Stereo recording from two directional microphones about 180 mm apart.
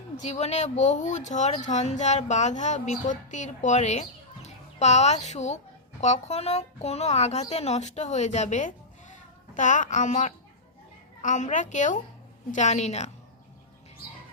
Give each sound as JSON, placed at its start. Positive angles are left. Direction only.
{"t": 0.2, "sound": "a woman's voice", "side_deg": 40}